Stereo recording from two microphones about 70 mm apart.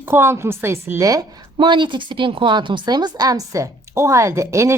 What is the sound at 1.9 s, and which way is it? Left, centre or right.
A woman's voice, right.